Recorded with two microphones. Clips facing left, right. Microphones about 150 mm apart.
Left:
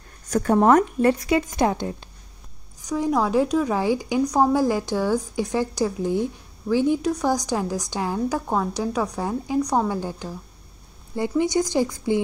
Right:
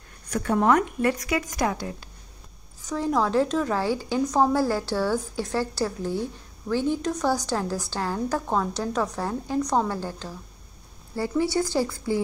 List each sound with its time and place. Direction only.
0.3 s speech: 40° left (ahead or behind)
1.1 s speech: 25° left (ahead or behind)
2.8 s a woman's voice: 15° left (ahead or behind)